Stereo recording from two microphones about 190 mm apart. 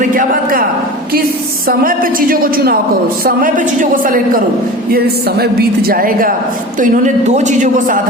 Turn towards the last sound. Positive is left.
turn(degrees=-45)  # may be behind; listen again after turning